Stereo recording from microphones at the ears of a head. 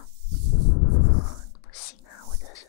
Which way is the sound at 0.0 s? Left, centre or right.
Left.